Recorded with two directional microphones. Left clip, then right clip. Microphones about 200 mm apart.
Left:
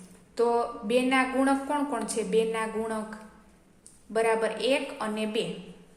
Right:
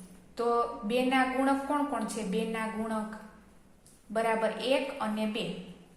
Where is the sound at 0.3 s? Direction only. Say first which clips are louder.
Left 3 dB; 25° left (ahead or behind).